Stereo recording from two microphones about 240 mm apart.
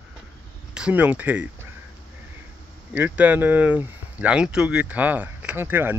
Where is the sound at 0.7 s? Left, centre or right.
Centre.